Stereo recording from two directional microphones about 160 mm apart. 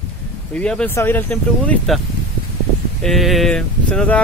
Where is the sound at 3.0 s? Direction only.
Centre (ahead or behind).